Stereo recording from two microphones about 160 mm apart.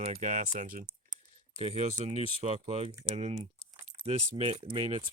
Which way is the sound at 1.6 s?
40° right (ahead or behind).